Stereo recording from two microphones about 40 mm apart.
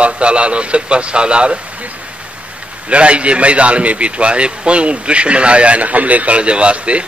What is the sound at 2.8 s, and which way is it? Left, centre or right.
A man's voice, right.